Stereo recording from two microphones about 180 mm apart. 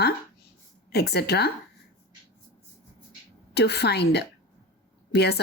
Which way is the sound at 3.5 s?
65° left (ahead or behind).